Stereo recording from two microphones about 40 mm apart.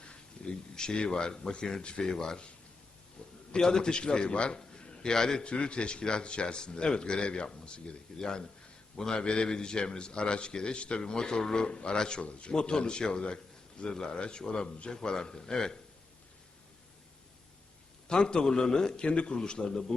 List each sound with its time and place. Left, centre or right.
0.4 s a sound: left
0.8 s a man's voice: left
3.2 s a sound: left
3.5 s a man's voice: centre
5.4 s a man's voice: left
18.1 s a man's voice: left